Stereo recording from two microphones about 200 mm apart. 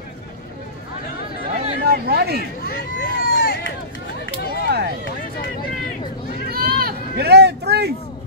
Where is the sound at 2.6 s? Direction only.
45° left (ahead or behind).